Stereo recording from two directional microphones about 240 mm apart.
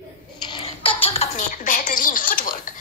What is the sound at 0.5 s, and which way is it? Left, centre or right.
Speech, left.